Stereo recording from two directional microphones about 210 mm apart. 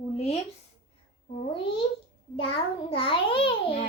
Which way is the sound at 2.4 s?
25° left (ahead or behind).